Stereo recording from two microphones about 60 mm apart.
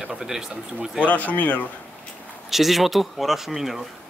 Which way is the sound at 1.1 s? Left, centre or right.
Left.